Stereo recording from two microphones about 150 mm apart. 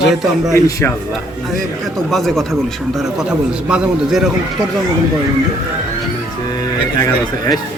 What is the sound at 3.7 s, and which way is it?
Speech, 5° right (ahead or behind).